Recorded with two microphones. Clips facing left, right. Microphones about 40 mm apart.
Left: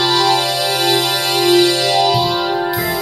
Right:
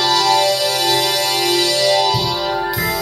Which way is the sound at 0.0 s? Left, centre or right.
Left.